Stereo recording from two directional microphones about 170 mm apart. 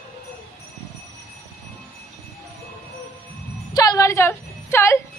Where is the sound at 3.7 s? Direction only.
20° left (ahead or behind).